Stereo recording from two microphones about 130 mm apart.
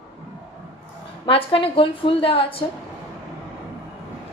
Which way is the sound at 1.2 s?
45° left (ahead or behind).